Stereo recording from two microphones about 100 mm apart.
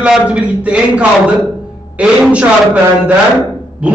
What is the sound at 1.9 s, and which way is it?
Speech, 10° right (ahead or behind).